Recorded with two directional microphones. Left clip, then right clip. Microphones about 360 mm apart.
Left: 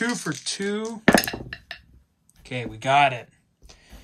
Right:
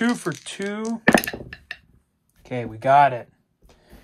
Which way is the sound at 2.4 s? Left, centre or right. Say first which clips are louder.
Right 4 dB; centre.